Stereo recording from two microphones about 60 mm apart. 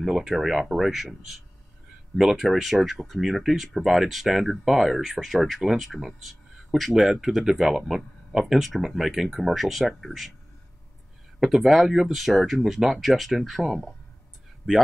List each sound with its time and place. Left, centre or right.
0.0 s speech: centre
11.3 s speech: centre